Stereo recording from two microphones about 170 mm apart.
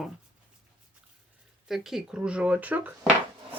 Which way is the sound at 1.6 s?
Centre (ahead or behind).